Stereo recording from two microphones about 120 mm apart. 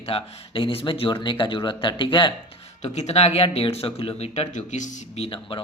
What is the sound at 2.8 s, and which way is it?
Speech, 65° left (ahead or behind).